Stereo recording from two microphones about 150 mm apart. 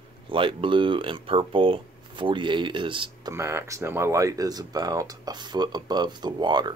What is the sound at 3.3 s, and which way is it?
Speech, 15° right (ahead or behind).